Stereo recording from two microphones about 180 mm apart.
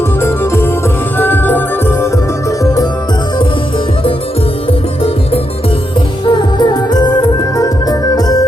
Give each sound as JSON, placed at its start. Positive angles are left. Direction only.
{"t": 0.2, "sound": "music", "side_deg": 15}
{"t": 6.2, "sound": "music", "side_deg": 25}